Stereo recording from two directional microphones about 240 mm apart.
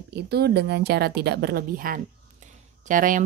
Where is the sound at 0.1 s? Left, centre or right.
Right.